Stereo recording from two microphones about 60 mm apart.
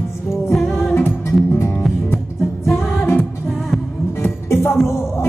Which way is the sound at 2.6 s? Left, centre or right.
Centre.